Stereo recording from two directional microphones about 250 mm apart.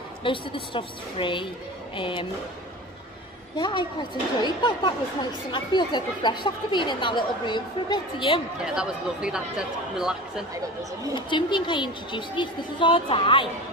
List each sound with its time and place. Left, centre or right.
0.2 s speech: centre
3.5 s speech: centre
8.6 s speech: centre
11.1 s speech: centre